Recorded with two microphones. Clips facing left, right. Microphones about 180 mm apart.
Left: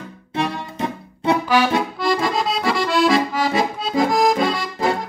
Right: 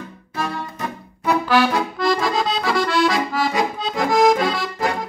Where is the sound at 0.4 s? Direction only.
25° left (ahead or behind).